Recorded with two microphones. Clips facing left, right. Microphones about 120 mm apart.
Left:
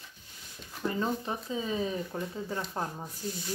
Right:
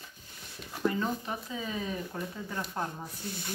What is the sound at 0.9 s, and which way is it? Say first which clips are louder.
Speech: left 1 dB; 30° left (ahead or behind).